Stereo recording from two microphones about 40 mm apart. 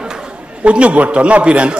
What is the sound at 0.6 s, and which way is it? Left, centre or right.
A man's voice, right.